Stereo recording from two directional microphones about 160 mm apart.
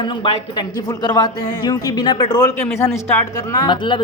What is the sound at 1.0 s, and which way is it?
A woman's voice, 25° left (ahead or behind).